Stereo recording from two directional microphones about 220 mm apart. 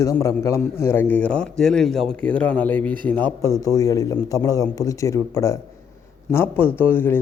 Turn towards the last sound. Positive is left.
turn(degrees=10)  # may be behind; listen again after turning